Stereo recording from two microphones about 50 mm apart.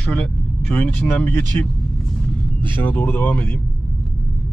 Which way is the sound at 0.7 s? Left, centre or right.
Left.